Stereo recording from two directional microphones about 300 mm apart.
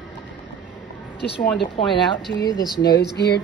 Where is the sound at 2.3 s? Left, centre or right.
Centre.